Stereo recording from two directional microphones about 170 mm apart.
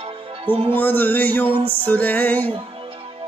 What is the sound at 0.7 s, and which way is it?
Music, 10° left (ahead or behind).